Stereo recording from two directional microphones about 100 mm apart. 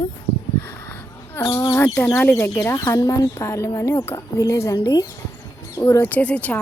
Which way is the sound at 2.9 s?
35° left (ahead or behind).